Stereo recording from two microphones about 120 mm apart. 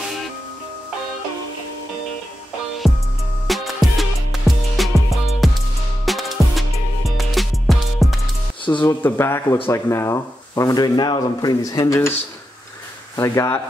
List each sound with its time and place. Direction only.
3.4 s music: centre (ahead or behind)
8.7 s speech: 20° left (ahead or behind)
13.1 s speech: 25° left (ahead or behind)